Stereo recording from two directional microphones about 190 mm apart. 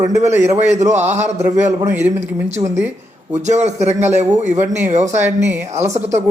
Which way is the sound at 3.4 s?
35° right (ahead or behind).